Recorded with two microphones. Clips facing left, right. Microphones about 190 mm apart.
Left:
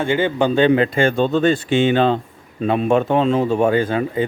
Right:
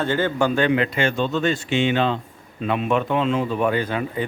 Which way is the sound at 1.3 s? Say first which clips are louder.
Left 6 dB; 35° left (ahead or behind).